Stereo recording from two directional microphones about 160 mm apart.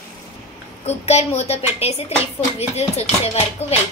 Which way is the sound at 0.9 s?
40° left (ahead or behind).